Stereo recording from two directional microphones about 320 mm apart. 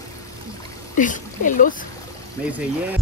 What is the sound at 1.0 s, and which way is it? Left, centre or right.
Speech, left.